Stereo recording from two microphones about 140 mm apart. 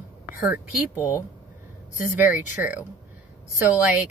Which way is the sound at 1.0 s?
25° left (ahead or behind).